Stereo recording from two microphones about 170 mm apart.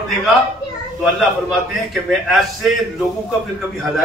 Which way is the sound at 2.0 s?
Centre (ahead or behind).